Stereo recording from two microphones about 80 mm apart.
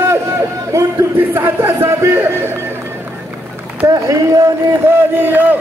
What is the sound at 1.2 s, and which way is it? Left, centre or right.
Speech, right.